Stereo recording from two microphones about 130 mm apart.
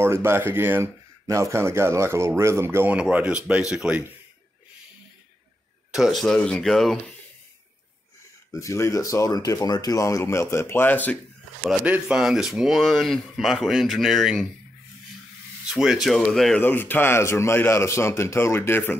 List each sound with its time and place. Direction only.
0.0 s speech: 20° right (ahead or behind)
5.9 s speech: centre (ahead or behind)
8.5 s speech: 20° left (ahead or behind)
11.6 s speech: 5° right (ahead or behind)
15.6 s speech: 5° right (ahead or behind); by 18.9 s 15° left (ahead or behind)